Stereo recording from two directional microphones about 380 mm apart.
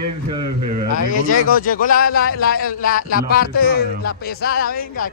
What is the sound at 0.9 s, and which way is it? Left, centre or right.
A man's voice, left.